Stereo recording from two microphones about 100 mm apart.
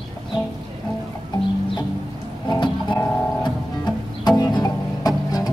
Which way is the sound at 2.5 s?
50° left (ahead or behind).